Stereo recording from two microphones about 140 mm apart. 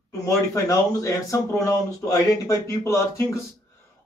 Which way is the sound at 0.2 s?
25° left (ahead or behind).